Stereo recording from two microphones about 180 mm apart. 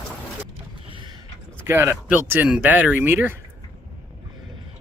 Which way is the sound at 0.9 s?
30° right (ahead or behind).